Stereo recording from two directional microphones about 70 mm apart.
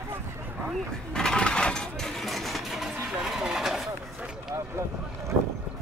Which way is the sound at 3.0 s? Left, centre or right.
Centre.